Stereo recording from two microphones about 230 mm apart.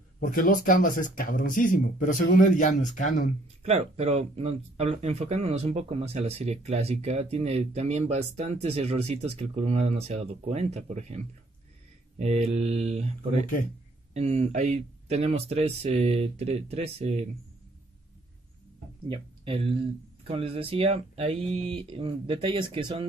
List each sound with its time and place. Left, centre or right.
0.2 s speech: left
3.6 s speech: right
19.0 s speech: right